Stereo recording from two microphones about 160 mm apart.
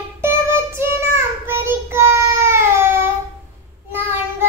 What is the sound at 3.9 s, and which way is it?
Child singing, 15° right (ahead or behind).